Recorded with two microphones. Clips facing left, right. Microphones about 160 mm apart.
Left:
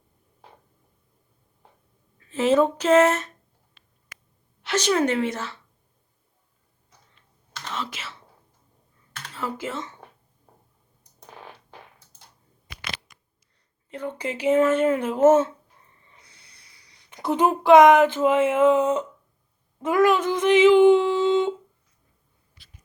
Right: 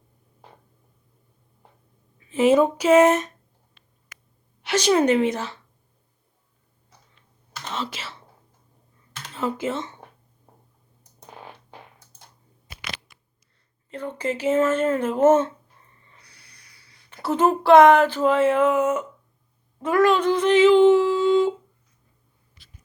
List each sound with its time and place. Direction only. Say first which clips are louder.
2.1 s speech: right 2 dB; 15° right (ahead or behind)
4.6 s a woman's voice: right 3 dB; 15° right (ahead or behind)
7.7 s whispering: right 2 dB; 30° right (ahead or behind)
9.3 s speech: right 5 dB; 20° right (ahead or behind)
13.9 s speech: right 2 dB; 10° left (ahead or behind)
16.1 s speech: even; 20° left (ahead or behind)